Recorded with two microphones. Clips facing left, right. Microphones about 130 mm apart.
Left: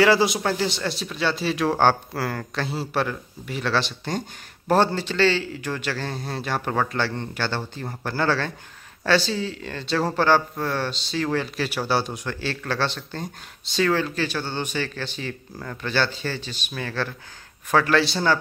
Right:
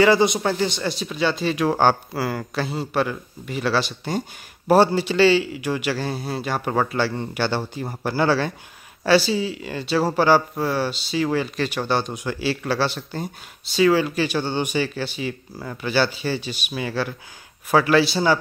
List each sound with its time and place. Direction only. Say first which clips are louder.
0.0 s speech: right 2 dB; centre (ahead or behind)